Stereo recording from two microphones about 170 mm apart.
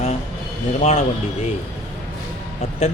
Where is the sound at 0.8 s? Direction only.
40° left (ahead or behind).